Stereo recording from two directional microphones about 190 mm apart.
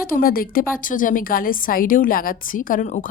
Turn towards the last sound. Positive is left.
turn(degrees=45)  # may be behind; listen again after turning